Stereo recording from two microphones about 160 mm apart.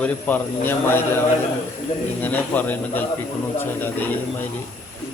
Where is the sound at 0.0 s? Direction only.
10° left (ahead or behind).